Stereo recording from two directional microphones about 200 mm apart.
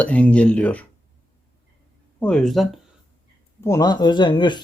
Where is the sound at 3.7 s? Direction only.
20° left (ahead or behind).